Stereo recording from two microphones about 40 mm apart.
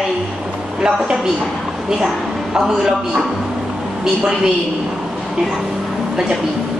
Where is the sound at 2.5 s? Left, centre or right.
Centre.